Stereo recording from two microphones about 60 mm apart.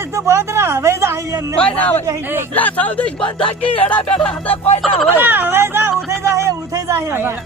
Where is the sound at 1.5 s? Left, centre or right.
Left.